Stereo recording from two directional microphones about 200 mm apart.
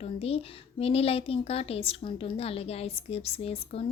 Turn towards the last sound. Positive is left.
turn(degrees=30)  # may be behind; listen again after turning